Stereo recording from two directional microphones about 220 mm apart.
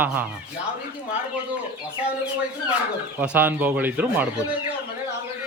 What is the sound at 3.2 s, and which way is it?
Speech, 10° right (ahead or behind).